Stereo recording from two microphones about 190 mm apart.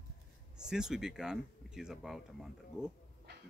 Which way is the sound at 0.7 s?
5° right (ahead or behind).